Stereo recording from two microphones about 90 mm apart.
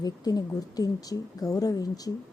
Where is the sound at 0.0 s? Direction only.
45° left (ahead or behind).